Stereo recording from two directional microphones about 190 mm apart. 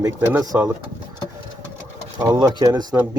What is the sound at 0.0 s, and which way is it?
Speech, 20° right (ahead or behind).